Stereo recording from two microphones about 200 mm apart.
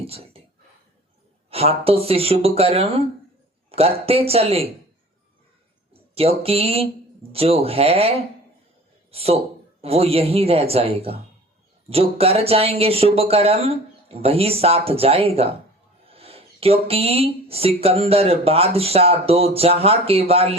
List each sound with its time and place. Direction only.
0.0 s whispering: 30° right (ahead or behind)
1.5 s speech: 30° right (ahead or behind)
5.9 s speech: 30° right (ahead or behind)
9.1 s speech: 30° right (ahead or behind)